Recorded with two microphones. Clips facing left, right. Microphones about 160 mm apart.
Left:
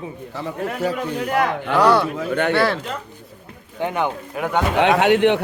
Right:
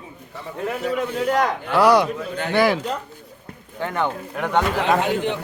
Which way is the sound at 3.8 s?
15° left (ahead or behind).